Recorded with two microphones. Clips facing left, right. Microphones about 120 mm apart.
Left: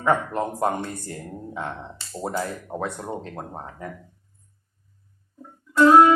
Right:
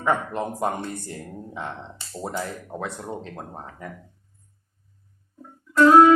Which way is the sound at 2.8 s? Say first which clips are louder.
Left 2 dB; 25° left (ahead or behind).